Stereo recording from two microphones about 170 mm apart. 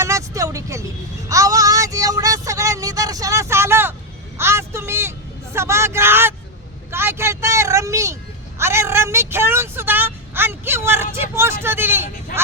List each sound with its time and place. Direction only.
0.0 s vehicle: 15° right (ahead or behind)
1.3 s a sound: 20° right (ahead or behind)
5.5 s a child's voice: 15° right (ahead or behind)